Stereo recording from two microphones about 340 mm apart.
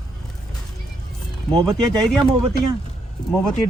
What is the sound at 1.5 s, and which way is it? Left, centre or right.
Speech, centre.